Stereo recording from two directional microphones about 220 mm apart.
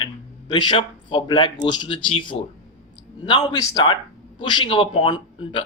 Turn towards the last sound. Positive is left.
turn(degrees=20)  # may be behind; listen again after turning